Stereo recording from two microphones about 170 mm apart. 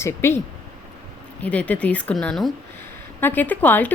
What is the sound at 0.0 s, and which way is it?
Speech, 15° left (ahead or behind).